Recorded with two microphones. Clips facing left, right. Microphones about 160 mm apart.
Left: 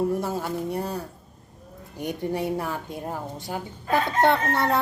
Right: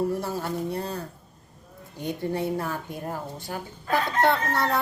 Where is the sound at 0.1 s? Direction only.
20° left (ahead or behind).